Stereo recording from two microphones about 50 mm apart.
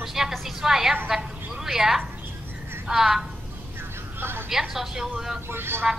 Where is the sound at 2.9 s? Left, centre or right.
Centre.